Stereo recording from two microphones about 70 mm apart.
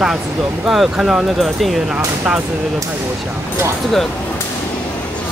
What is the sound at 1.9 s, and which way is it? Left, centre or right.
Speech, right.